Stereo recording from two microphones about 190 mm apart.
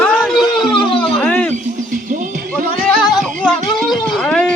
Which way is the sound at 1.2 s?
5° left (ahead or behind).